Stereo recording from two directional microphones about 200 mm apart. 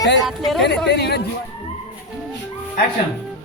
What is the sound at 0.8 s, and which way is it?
Speech, 55° left (ahead or behind).